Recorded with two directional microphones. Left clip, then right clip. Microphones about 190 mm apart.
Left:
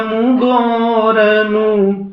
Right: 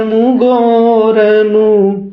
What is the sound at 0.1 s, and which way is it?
Mantra, 40° right (ahead or behind).